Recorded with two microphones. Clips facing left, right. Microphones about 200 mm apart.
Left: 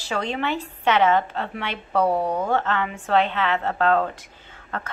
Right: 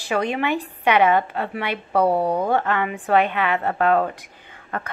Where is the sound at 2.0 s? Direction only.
30° right (ahead or behind).